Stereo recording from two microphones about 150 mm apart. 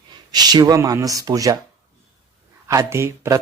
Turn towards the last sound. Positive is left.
turn(degrees=-20)  # may be behind; listen again after turning